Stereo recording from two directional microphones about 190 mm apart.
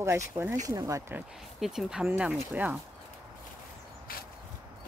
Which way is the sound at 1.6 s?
Centre (ahead or behind).